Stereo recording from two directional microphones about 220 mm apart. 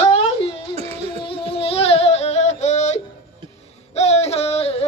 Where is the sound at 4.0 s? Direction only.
30° left (ahead or behind).